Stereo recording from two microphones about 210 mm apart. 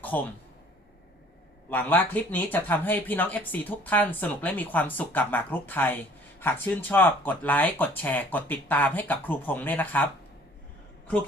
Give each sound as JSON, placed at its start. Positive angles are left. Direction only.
{"t": 0.1, "sound": "speech", "side_deg": 10}
{"t": 1.7, "sound": "speech", "side_deg": 10}